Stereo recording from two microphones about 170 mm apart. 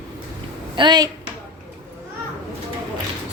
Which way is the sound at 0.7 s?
25° right (ahead or behind).